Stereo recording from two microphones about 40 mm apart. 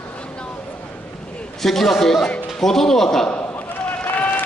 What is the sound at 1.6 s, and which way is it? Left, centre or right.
Speech, centre.